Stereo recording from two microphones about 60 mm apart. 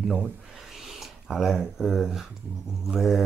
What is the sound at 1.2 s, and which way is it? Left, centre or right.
Speech, centre.